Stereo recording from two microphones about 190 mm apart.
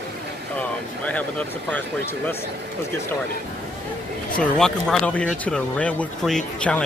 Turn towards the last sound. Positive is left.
turn(degrees=5)  # may be behind; listen again after turning